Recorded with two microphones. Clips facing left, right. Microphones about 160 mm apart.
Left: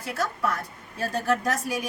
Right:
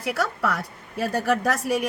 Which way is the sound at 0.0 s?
75° right (ahead or behind).